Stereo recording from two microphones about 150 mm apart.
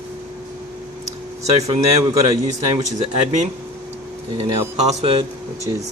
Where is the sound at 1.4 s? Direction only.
45° right (ahead or behind).